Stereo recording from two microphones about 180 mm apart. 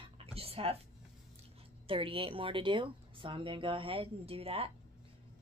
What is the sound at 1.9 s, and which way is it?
A woman's voice, 30° right (ahead or behind).